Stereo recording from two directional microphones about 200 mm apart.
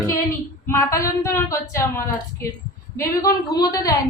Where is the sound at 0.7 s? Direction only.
15° left (ahead or behind).